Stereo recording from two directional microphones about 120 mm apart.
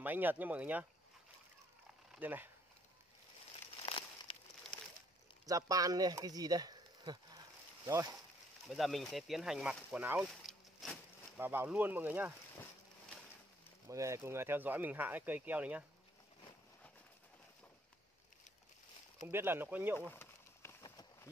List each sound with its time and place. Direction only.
0.0 s speech: 15° right (ahead or behind)
2.1 s speech: 15° right (ahead or behind)
3.8 s a sound: 50° left (ahead or behind)
4.7 s crumpling: 10° left (ahead or behind)
5.5 s speech: 30° right (ahead or behind)
8.6 s speech: centre (ahead or behind)
10.4 s a sound: centre (ahead or behind)
11.3 s speech: 15° right (ahead or behind)
13.8 s speech: 25° right (ahead or behind)
19.2 s speech: 20° right (ahead or behind)
20.1 s a sound: 20° left (ahead or behind)
20.8 s a sound: 30° left (ahead or behind)